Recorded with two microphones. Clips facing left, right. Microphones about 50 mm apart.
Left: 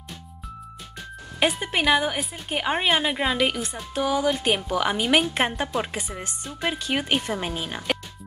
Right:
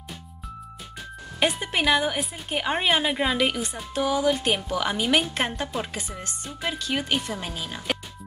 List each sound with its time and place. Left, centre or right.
1.4 s a woman's voice: centre; by 7.8 s left